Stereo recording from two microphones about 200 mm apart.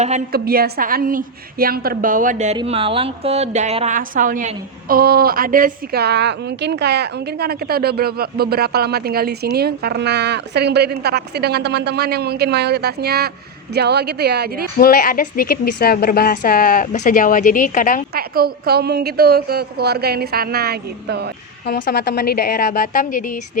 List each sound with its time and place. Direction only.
0.3 s a woman's voice: 50° right (ahead or behind)
2.6 s a woman's voice: 25° right (ahead or behind); by 14.7 s 50° right (ahead or behind)
14.8 s a woman's voice: 45° left (ahead or behind)
18.1 s a woman's voice: 50° right (ahead or behind)
21.7 s a woman's voice: 55° left (ahead or behind)